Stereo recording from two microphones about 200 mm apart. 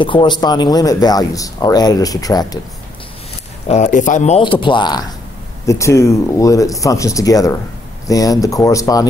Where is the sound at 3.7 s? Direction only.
35° left (ahead or behind).